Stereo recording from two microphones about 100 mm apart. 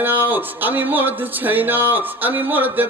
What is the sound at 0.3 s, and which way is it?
A man's voice, 20° right (ahead or behind).